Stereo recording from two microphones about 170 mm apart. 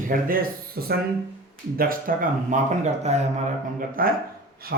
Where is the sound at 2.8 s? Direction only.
40° right (ahead or behind).